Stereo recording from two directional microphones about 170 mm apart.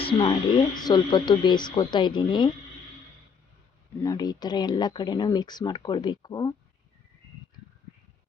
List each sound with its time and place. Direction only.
0.2 s speech: 30° left (ahead or behind)
4.0 s speech: 20° left (ahead or behind)